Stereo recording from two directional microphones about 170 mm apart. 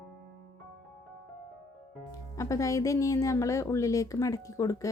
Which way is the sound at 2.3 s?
20° left (ahead or behind).